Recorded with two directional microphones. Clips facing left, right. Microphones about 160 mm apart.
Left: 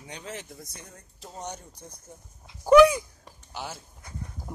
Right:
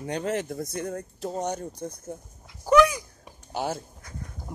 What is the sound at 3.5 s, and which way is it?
Speech, 45° right (ahead or behind).